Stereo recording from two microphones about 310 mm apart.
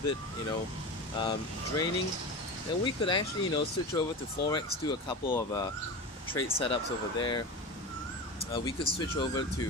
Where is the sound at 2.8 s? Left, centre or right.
Centre.